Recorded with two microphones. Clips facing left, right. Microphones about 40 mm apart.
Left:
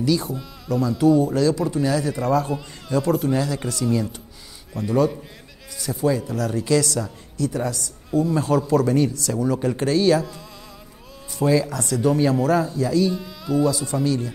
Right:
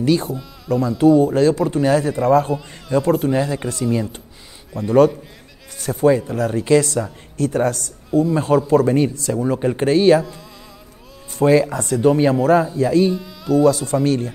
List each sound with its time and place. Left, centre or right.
0.0 s speech: right
5.8 s speech: right
7.3 s a man's voice: right
11.3 s speech: right
13.1 s speech: centre
13.7 s speech: right